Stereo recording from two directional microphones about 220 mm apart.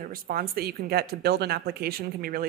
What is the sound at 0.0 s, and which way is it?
A woman's voice, 40° right (ahead or behind).